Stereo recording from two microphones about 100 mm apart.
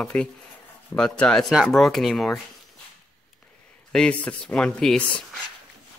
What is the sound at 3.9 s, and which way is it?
Speech, 10° left (ahead or behind).